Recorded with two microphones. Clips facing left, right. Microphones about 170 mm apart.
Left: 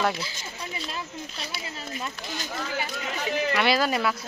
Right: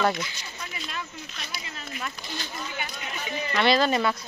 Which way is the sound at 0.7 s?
30° left (ahead or behind).